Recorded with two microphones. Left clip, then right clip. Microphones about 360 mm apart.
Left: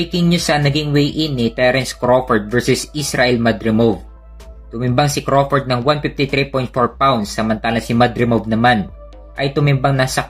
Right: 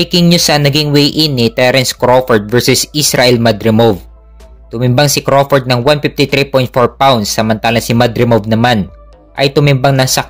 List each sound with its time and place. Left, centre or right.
0.0 s speech: right